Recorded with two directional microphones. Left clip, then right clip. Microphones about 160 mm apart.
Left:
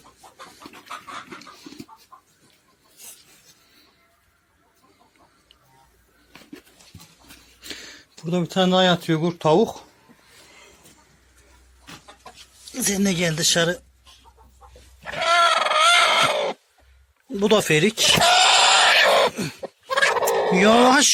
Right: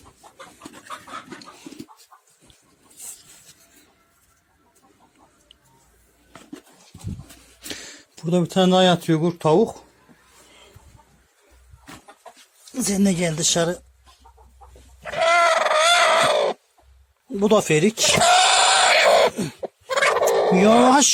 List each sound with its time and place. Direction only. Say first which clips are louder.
7.6 s speech: right 2 dB; 25° right (ahead or behind); by 9.9 s 10° right (ahead or behind)
10.5 s a sound: even; centre (ahead or behind)
12.8 s speech: even; 10° right (ahead or behind)
15.2 s goat: right 1 dB; centre (ahead or behind)
17.4 s a sound: even; 10° right (ahead or behind)
20.1 s fowl: right 4 dB; 20° right (ahead or behind)